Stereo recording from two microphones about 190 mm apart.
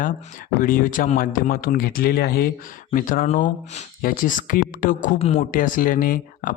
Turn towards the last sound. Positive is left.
turn(degrees=45)  # may be behind; listen again after turning